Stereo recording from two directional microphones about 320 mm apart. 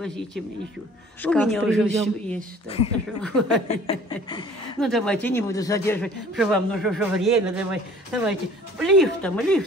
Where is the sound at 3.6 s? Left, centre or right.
Centre.